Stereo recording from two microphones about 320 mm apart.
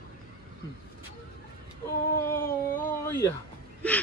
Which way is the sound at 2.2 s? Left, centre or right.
Centre.